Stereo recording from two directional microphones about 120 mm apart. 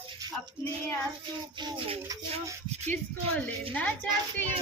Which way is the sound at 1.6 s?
45° right (ahead or behind).